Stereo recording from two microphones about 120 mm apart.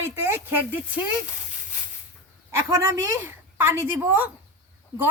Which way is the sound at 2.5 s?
20° right (ahead or behind).